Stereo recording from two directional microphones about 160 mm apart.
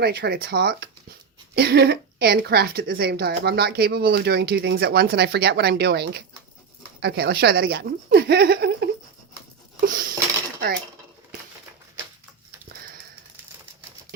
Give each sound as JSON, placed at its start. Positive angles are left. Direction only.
{"t": 0.0, "sound": "a woman's voice", "side_deg": -75}
{"t": 9.8, "sound": "dishes", "side_deg": -65}